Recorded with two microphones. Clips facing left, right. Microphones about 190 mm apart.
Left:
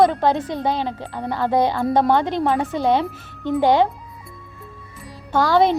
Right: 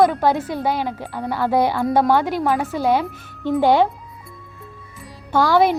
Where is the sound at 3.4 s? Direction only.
15° left (ahead or behind).